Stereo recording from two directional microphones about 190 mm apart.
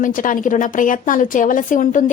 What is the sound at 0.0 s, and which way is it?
A woman's voice, 45° left (ahead or behind).